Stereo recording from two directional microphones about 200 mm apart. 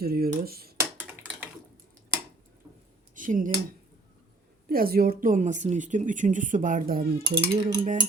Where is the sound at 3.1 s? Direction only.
40° right (ahead or behind).